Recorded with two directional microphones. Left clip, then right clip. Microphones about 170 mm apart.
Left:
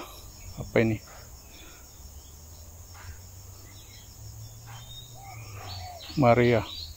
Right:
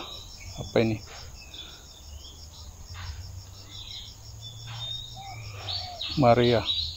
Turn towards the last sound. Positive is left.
turn(degrees=15)  # may be behind; listen again after turning